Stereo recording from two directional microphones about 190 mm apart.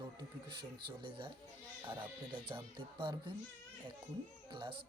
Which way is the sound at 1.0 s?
25° right (ahead or behind).